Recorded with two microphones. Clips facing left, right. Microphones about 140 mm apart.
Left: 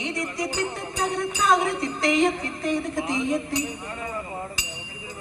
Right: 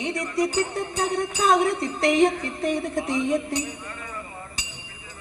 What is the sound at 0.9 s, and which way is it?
Jingle bell, 65° right (ahead or behind).